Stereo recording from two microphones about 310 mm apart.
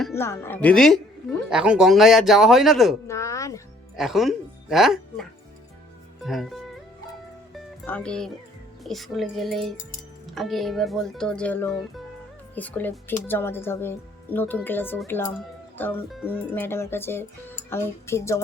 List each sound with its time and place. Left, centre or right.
0.0 s a woman's voice: centre
3.1 s a sound: centre
3.9 s speech: centre
6.2 s a woman's voice: centre
7.5 s music: centre
8.8 s a woman's voice: centre